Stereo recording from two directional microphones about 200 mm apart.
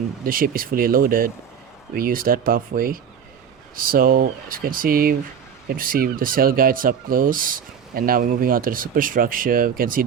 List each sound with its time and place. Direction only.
0.3 s ratchet: 45° right (ahead or behind)